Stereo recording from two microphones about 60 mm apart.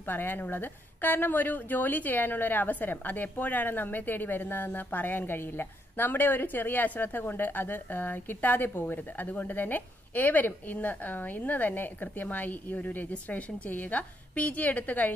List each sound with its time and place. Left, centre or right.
0.0 s speech: left